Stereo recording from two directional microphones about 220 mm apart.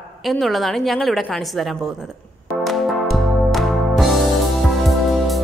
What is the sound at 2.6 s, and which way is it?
Music, centre (ahead or behind).